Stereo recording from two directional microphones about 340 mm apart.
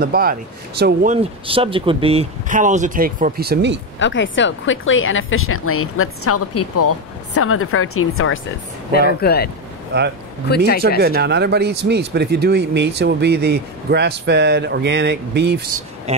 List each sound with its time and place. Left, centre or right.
0.0 s speech: right
4.0 s speech: left
8.9 s speech: left
10.5 s speech: left
11.0 s speech: right
16.1 s speech: centre